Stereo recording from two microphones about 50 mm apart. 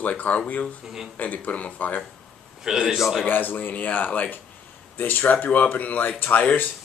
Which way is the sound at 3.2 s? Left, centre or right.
Left.